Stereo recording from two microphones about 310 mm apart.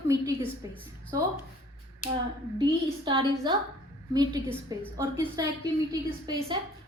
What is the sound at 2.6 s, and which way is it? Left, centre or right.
A woman's voice, centre.